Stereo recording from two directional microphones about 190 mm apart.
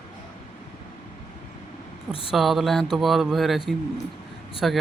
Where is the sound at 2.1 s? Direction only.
30° left (ahead or behind).